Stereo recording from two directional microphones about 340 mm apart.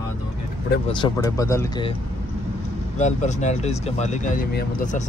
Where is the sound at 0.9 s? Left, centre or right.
Centre.